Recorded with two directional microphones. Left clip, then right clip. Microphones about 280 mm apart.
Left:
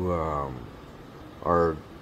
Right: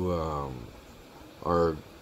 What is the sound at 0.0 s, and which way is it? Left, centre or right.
Speech, centre.